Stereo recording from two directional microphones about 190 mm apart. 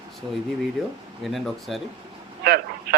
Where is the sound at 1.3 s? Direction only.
Centre (ahead or behind).